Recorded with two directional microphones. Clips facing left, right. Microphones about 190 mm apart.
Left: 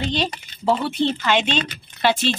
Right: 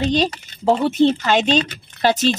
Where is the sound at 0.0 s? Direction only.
40° right (ahead or behind).